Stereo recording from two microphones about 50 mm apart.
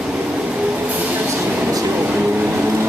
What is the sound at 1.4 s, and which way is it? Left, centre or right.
Vehicle, right.